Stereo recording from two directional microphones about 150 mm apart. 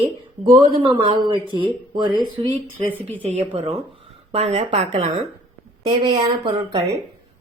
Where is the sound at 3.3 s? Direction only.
40° right (ahead or behind).